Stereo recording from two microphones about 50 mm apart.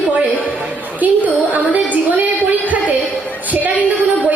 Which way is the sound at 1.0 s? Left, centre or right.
Right.